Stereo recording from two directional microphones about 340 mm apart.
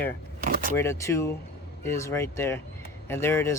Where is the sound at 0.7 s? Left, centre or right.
Centre.